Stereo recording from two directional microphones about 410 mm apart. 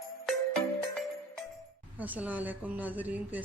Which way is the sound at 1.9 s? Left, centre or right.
Centre.